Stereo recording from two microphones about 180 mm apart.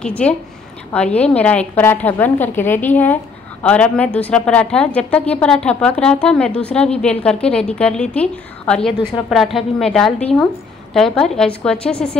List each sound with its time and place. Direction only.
0.0 s a woman's voice: 5° left (ahead or behind)